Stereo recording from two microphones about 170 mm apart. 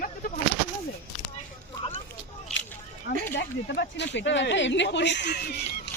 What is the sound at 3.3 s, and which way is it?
Speech, 90° left.